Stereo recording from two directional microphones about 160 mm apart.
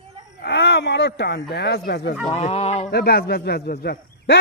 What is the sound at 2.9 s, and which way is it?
A man's voice, 80° left.